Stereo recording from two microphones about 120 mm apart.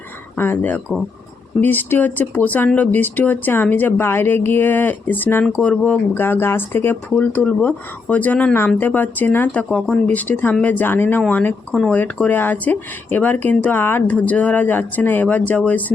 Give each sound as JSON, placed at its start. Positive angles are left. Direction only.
{"t": 0.3, "sound": "speech", "side_deg": 15}
{"t": 9.6, "sound": "speech", "side_deg": 5}